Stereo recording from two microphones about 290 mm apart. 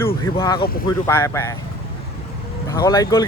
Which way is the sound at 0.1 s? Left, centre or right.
Centre.